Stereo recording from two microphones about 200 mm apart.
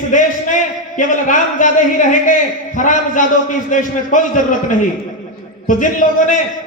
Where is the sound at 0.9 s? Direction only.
40° left (ahead or behind).